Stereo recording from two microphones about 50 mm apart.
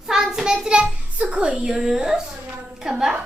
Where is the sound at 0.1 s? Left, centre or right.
Centre.